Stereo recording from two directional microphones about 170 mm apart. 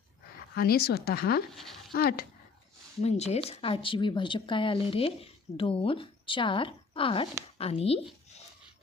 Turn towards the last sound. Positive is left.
turn(degrees=35)  # may be behind; listen again after turning